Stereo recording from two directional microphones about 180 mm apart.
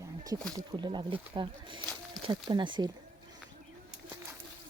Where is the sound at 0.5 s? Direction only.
25° right (ahead or behind).